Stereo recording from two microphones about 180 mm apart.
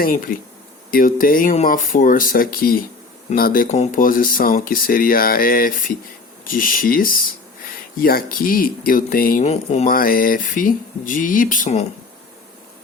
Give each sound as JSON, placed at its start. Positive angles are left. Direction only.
{"t": 0.0, "sound": "speech", "side_deg": 55}
{"t": 9.4, "sound": "speech", "side_deg": 35}
{"t": 9.9, "sound": "speech", "side_deg": 55}